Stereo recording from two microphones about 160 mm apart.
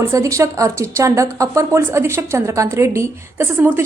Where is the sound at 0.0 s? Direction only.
20° right (ahead or behind).